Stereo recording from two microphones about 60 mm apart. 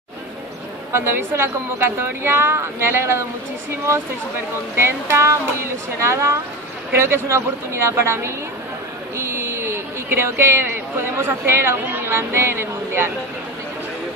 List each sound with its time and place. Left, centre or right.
0.9 s a woman's voice: right
4.7 s speech: right